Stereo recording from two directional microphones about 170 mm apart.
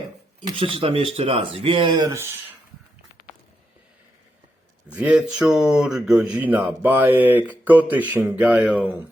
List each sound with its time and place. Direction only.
0.4 s speech: 30° right (ahead or behind)
4.9 s speech: 10° right (ahead or behind)